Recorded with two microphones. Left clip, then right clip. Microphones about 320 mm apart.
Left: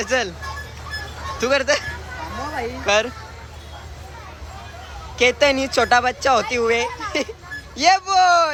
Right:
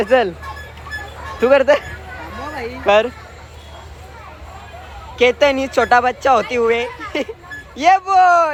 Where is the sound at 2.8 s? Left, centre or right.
Centre.